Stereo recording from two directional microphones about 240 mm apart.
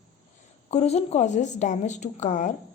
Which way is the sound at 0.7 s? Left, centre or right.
Left.